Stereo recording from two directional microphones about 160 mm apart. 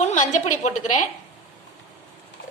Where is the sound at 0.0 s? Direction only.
50° left (ahead or behind).